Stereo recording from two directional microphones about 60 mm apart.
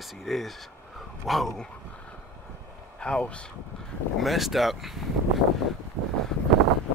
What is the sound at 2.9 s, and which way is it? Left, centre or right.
Speech, centre.